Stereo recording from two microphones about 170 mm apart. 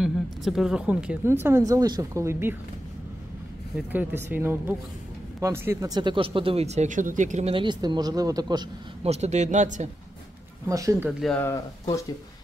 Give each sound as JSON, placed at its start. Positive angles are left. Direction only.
{"t": 0.0, "sound": "speech", "side_deg": 0}
{"t": 3.9, "sound": "speech", "side_deg": -10}
{"t": 9.0, "sound": "speech", "side_deg": -40}
{"t": 10.7, "sound": "speech", "side_deg": -20}
{"t": 11.1, "sound": "speech", "side_deg": 0}